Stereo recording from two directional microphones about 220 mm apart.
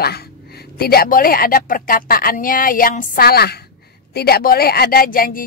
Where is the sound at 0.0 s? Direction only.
45° left (ahead or behind).